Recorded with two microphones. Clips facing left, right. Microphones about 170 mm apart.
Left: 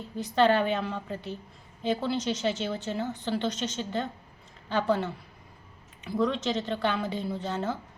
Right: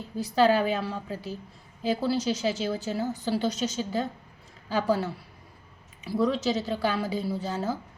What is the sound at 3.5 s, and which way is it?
Speech, 40° right (ahead or behind).